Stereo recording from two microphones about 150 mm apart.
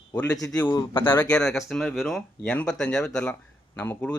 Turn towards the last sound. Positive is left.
turn(degrees=10)  # may be behind; listen again after turning